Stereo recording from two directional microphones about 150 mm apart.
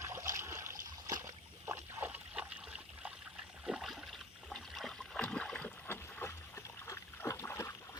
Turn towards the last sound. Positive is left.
turn(degrees=20)  # may be behind; listen again after turning